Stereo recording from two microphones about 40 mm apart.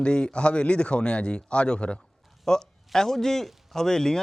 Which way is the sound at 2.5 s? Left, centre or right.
Centre.